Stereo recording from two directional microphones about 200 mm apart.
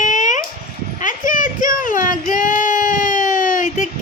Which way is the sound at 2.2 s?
40° left (ahead or behind).